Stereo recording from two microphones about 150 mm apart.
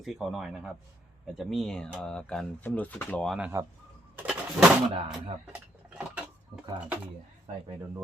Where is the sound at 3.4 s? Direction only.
20° right (ahead or behind).